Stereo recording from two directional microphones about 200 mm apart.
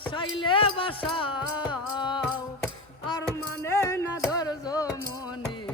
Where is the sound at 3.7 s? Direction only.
15° left (ahead or behind).